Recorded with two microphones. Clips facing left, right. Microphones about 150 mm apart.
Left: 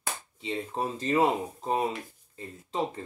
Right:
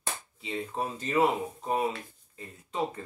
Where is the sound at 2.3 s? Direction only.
30° left (ahead or behind).